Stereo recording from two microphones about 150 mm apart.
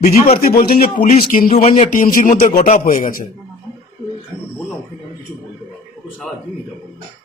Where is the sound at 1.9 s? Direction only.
65° left (ahead or behind).